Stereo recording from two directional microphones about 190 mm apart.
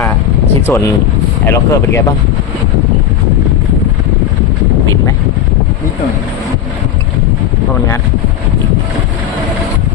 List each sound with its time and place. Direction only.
0.7 s speech: 20° left (ahead or behind)